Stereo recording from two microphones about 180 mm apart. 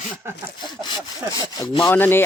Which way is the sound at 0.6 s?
25° left (ahead or behind).